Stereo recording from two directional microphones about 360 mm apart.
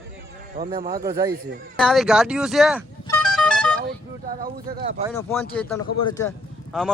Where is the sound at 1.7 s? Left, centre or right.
Centre.